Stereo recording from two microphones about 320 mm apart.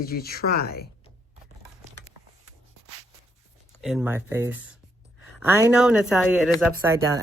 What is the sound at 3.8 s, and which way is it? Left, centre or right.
Speech, centre.